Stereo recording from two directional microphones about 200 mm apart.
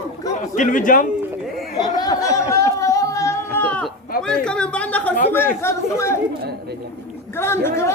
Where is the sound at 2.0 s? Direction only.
20° left (ahead or behind).